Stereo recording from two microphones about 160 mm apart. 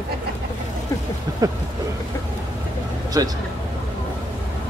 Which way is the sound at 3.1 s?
25° right (ahead or behind).